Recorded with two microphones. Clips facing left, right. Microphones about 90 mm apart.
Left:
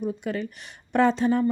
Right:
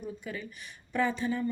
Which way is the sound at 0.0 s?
65° left (ahead or behind).